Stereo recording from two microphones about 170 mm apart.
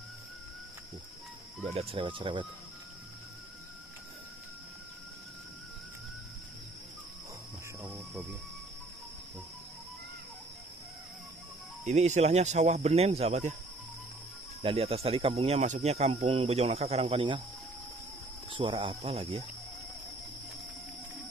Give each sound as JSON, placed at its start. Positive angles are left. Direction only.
{"t": 1.7, "sound": "speech", "side_deg": -35}
{"t": 7.9, "sound": "music", "side_deg": 0}
{"t": 11.8, "sound": "speech", "side_deg": -40}
{"t": 14.6, "sound": "speech", "side_deg": -35}
{"t": 18.5, "sound": "speech", "side_deg": -30}